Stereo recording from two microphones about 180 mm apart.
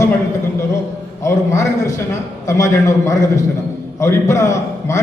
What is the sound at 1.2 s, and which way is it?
A man's voice, 15° left (ahead or behind).